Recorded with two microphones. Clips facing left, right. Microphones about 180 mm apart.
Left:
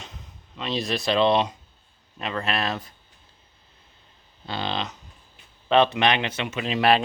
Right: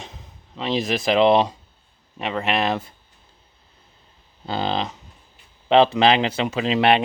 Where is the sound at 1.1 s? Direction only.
30° right (ahead or behind).